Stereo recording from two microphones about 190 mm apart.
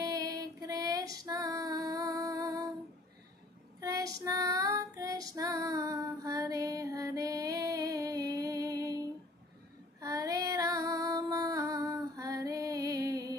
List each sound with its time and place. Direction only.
0.0 s female singing: 20° right (ahead or behind)
3.8 s child singing: 20° right (ahead or behind)
9.9 s female singing: 20° right (ahead or behind)